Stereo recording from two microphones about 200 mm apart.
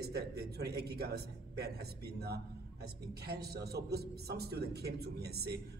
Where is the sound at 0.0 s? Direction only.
55° right (ahead or behind).